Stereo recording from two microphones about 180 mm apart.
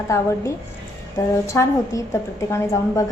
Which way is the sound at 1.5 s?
15° left (ahead or behind).